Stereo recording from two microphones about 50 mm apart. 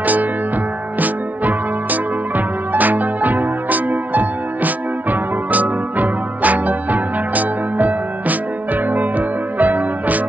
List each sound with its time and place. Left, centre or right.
0.0 s music: right